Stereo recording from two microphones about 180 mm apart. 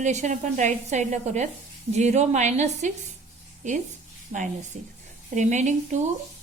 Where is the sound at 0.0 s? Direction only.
40° right (ahead or behind).